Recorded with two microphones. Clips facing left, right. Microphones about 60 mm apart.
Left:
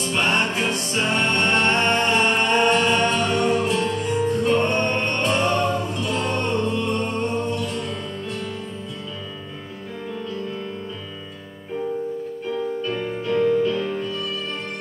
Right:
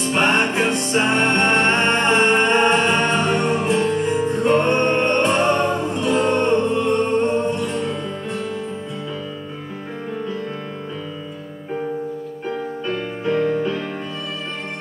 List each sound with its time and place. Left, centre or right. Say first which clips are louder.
0.0 s music: right 4 dB; right
12.4 s music: right 1 dB; right